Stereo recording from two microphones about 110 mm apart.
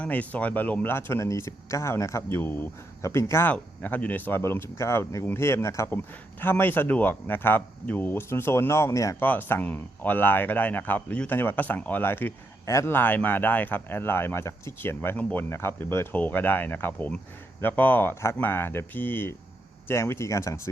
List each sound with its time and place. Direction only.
0.0 s speech: 15° left (ahead or behind); by 9.1 s 30° left (ahead or behind)
9.2 s speech: 15° left (ahead or behind)